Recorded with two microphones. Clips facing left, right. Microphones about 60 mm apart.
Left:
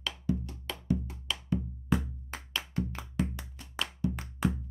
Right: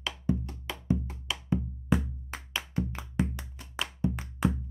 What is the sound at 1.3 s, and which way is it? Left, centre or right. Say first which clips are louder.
Music: right 2 dB; centre.